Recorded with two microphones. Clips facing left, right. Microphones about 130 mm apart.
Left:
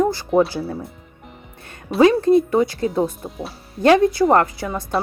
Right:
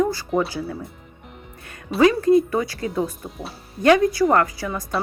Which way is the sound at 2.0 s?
25° left (ahead or behind).